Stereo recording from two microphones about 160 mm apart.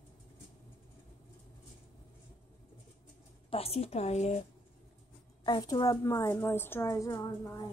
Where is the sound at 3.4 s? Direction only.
40° left (ahead or behind).